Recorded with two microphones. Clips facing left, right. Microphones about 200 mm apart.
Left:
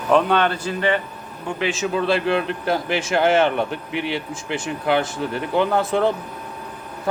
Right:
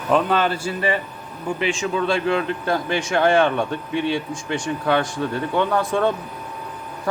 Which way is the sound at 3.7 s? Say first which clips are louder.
Right 3 dB; 80° left.